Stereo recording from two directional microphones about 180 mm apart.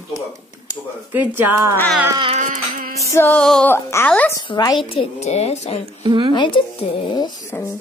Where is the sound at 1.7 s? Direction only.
10° left (ahead or behind).